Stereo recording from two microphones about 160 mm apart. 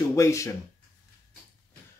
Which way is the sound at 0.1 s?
20° left (ahead or behind).